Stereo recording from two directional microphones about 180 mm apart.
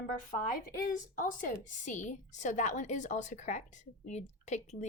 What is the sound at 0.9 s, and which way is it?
A woman's voice, 50° left (ahead or behind).